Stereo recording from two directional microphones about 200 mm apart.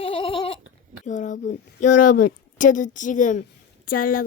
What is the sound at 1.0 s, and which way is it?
A woman's voice, 40° left (ahead or behind).